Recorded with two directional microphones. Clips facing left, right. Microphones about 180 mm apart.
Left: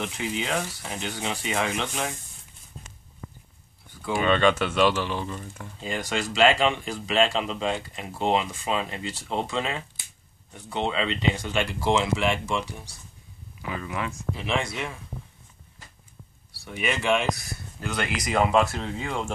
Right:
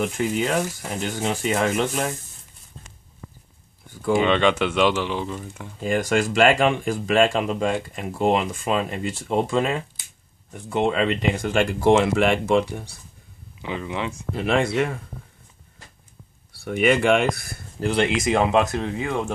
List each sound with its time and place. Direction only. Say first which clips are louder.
0.0 s speech: right 7 dB; 50° right (ahead or behind)
4.1 s speech: right 3 dB; 20° right (ahead or behind)
5.8 s speech: right 8 dB; 50° right (ahead or behind)
13.6 s speech: right 3 dB; 20° right (ahead or behind)
14.3 s speech: right 9 dB; 55° right (ahead or behind)
16.5 s speech: right 10 dB; 60° right (ahead or behind)
17.7 s speech: right 9 dB; 30° right (ahead or behind)